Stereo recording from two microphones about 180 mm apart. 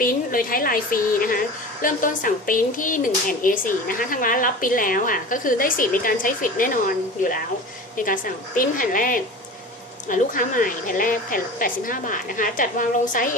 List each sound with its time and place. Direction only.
0.0 s a woman's voice: 50° left (ahead or behind)